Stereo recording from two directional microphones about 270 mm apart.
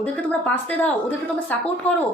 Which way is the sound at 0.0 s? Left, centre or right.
Centre.